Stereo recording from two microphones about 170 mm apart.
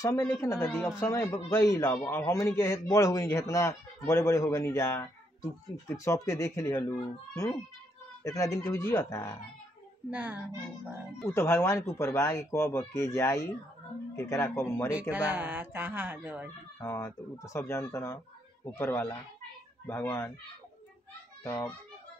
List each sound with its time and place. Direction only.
0.0 s a man's voice: 20° left (ahead or behind)
0.7 s speech: centre (ahead or behind)
0.9 s a man's voice: 20° left (ahead or behind)
8.2 s speech: 20° left (ahead or behind)
10.1 s speech: 10° right (ahead or behind)
11.2 s a man's voice: 15° left (ahead or behind)
15.1 s speech: 10° right (ahead or behind)
16.8 s a man's voice: 15° left (ahead or behind)
21.5 s a man's voice: 15° left (ahead or behind)